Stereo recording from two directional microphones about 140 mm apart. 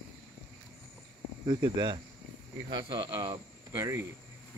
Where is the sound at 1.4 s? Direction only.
30° right (ahead or behind).